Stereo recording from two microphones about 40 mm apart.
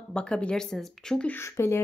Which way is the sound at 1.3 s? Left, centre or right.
Left.